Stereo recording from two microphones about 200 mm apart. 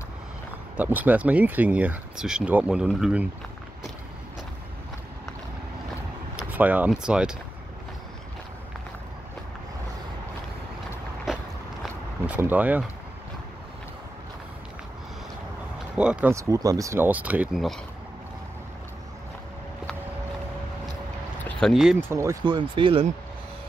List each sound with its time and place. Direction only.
0.7 s speech: 10° right (ahead or behind)
6.3 s speech: 10° right (ahead or behind)
11.8 s vehicle: 10° right (ahead or behind)
16.0 s speech: 5° right (ahead or behind)
21.5 s a sound: 5° left (ahead or behind)
22.1 s speech: 15° right (ahead or behind)